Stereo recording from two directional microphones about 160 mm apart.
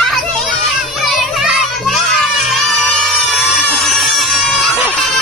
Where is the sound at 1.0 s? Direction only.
Centre (ahead or behind).